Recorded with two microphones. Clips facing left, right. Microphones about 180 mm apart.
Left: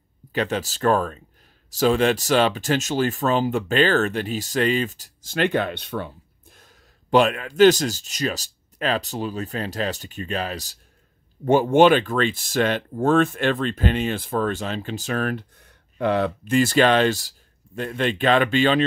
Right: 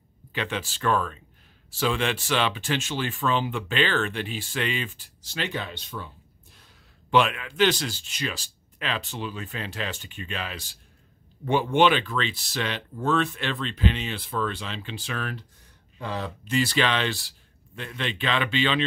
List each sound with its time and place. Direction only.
0.3 s speech: 40° left (ahead or behind); by 6.0 s 65° left (ahead or behind)
6.5 s speech: 45° left (ahead or behind)